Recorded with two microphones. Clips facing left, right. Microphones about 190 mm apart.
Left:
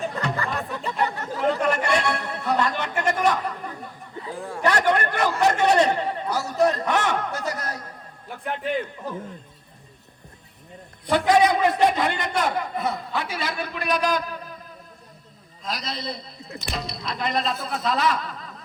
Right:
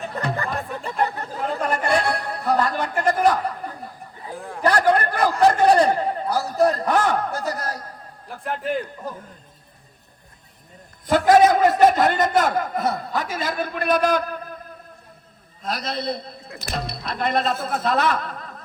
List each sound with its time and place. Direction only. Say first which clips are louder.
0.1 s music: right 1 dB; 35° right (ahead or behind)
4.6 s a sound: right 3 dB; 35° right (ahead or behind)
11.3 s a man's voice: right 4 dB; 45° right (ahead or behind)
15.6 s speech: right 5 dB; 55° right (ahead or behind)